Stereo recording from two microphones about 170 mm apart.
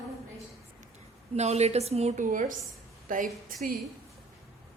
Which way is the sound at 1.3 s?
40° right (ahead or behind).